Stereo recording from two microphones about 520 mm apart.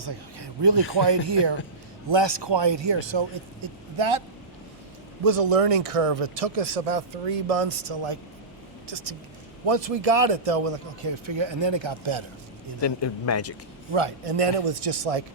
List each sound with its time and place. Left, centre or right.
0.0 s a man's voice: right
5.4 s speech: right
9.6 s a man's voice: right
12.8 s a man's voice: left
13.9 s speech: right